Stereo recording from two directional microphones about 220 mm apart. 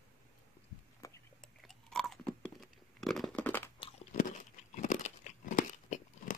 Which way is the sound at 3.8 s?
35° left (ahead or behind).